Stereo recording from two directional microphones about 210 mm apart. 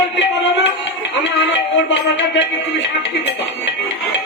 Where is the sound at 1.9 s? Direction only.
55° left (ahead or behind).